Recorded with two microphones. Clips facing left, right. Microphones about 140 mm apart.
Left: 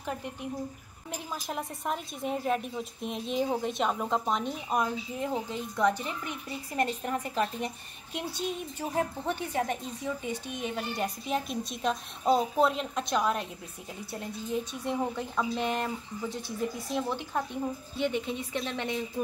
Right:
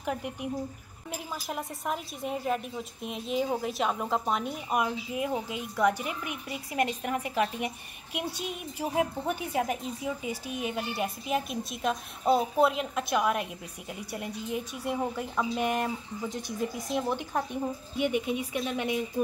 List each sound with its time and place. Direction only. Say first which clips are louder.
0.0 s a woman's voice: right 3 dB; 15° right (ahead or behind)
1.1 s a woman's voice: even; 5° right (ahead or behind)